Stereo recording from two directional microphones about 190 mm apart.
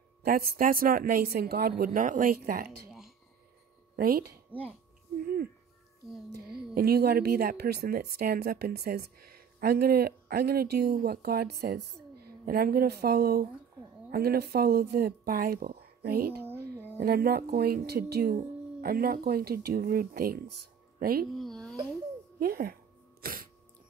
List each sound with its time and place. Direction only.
0.2 s speech: 50° right (ahead or behind)
3.9 s speech: 50° right (ahead or behind)
4.5 s speech: 5° right (ahead or behind)
5.2 s speech: 50° right (ahead or behind)
6.7 s a woman's voice: 55° right (ahead or behind)
21.3 s a child's voice: centre (ahead or behind)
22.4 s speech: 50° right (ahead or behind)
23.2 s sneeze: 50° right (ahead or behind)